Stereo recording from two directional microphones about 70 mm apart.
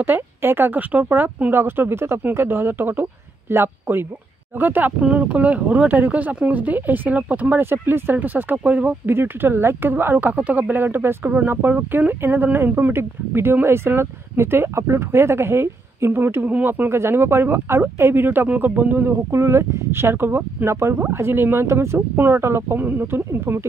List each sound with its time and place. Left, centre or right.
0.0 s speech: right
19.3 s speech: right